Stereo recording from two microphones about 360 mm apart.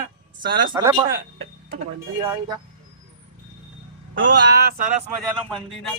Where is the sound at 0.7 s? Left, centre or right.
Centre.